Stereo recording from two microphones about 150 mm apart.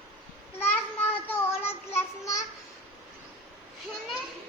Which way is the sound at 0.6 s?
15° left (ahead or behind).